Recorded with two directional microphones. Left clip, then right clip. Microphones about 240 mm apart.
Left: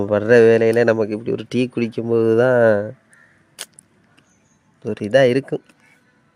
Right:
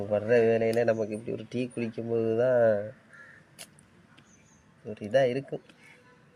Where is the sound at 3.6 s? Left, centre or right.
Left.